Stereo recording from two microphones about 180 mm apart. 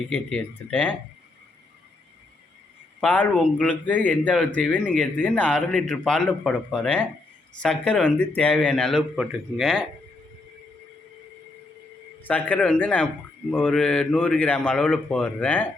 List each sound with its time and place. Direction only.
0.1 s speech: 10° left (ahead or behind)
3.0 s speech: 10° left (ahead or behind)
12.2 s speech: 10° left (ahead or behind)